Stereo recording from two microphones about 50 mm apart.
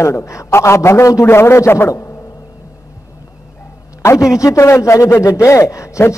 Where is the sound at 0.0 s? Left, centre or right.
Left.